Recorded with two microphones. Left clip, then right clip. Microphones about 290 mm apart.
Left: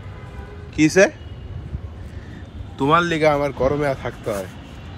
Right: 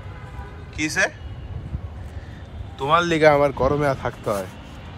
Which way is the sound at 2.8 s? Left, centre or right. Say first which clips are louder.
Left 2 dB; centre.